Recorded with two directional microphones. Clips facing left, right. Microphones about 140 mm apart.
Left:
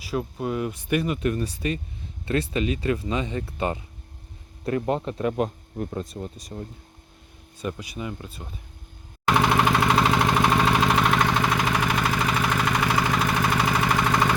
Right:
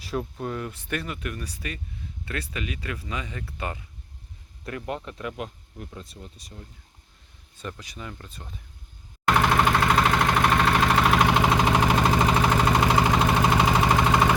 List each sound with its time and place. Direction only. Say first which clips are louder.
0.0 s speech: left 2 dB; 5° left (ahead or behind); by 5.5 s 35° left (ahead or behind)
5.7 s speech: left 10 dB; 50° left (ahead or behind)
7.6 s speech: left 6 dB; 10° left (ahead or behind)
9.2 s vehicle: left 1 dB; 5° left (ahead or behind)
11.1 s vehicle: right 2 dB; 15° right (ahead or behind)
11.5 s vehicle: right 3 dB; 25° right (ahead or behind)